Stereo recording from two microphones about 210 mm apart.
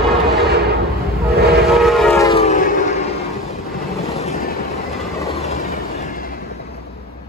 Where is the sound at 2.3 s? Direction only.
30° left (ahead or behind).